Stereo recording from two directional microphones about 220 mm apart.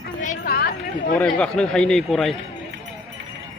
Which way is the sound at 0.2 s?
40° left (ahead or behind).